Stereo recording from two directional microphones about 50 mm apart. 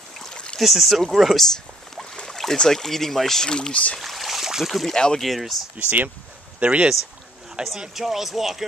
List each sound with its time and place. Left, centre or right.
0.2 s a sound: centre
0.6 s speech: centre
2.1 s boat: centre
2.5 s speech: centre
4.0 s speech: centre
4.9 s speech: centre
5.2 s speech: centre
5.8 s speech: right
7.9 s speech: centre